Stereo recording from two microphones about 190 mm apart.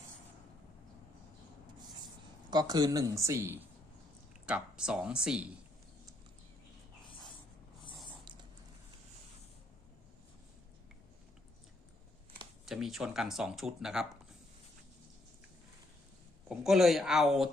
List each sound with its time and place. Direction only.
2.5 s speech: 20° right (ahead or behind); by 5.5 s 5° right (ahead or behind)
8.2 s a sound: 25° right (ahead or behind)
12.6 s speech: centre (ahead or behind)
16.5 s speech: centre (ahead or behind)